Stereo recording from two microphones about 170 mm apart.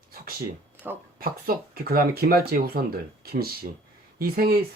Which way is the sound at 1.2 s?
60° right (ahead or behind).